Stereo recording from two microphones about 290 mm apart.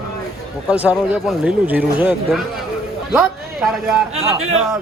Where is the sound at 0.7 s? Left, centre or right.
Centre.